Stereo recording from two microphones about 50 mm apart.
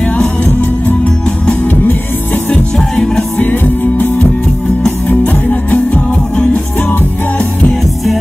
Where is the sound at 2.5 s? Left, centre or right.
Centre.